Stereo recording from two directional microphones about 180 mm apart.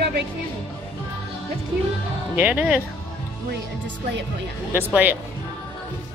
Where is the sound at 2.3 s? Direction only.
10° right (ahead or behind).